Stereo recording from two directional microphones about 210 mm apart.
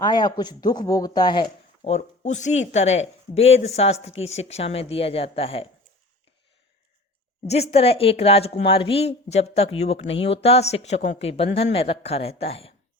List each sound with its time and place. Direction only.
0.0 s speech: 20° left (ahead or behind)
7.4 s speech: 30° left (ahead or behind)